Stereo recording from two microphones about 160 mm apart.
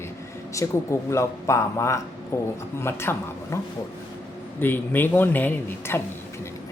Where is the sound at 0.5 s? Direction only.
20° left (ahead or behind).